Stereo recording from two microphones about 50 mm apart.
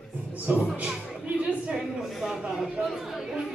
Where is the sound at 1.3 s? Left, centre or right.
Right.